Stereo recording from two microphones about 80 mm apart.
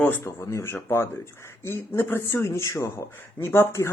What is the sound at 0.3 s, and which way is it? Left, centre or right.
Speech, left.